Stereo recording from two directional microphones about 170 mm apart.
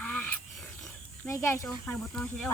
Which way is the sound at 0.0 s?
10° left (ahead or behind).